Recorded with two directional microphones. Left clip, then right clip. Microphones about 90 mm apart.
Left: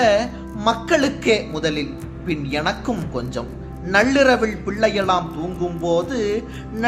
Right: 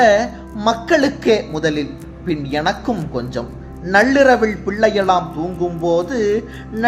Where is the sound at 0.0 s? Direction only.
45° right (ahead or behind).